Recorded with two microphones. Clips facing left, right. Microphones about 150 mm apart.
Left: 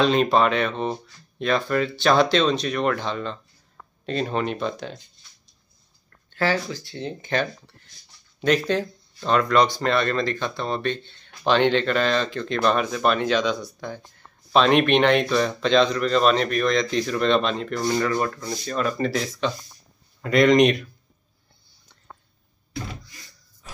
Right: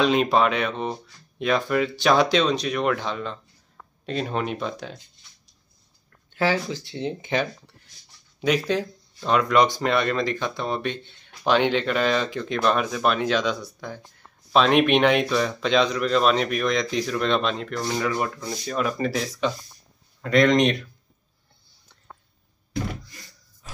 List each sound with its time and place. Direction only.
0.0 s speech: 5° right (ahead or behind)
6.3 s speech: 15° right (ahead or behind); by 18.0 s centre (ahead or behind)
18.0 s speech: 10° right (ahead or behind)
20.2 s speech: 5° left (ahead or behind)